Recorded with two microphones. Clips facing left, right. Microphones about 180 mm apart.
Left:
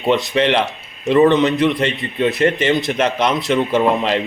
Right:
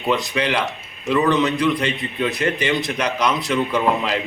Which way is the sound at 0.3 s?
25° left (ahead or behind).